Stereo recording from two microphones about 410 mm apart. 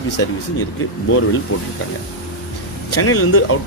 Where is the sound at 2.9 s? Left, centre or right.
Left.